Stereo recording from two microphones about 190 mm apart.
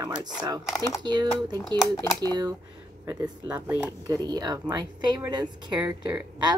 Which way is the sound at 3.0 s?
15° right (ahead or behind).